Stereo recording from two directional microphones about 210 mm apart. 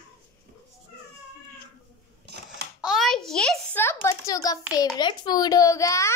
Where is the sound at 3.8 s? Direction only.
15° left (ahead or behind).